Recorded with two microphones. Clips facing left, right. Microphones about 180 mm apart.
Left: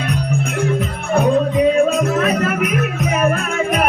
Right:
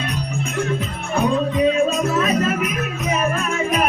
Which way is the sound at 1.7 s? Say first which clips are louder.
Left 3 dB; 60° left (ahead or behind).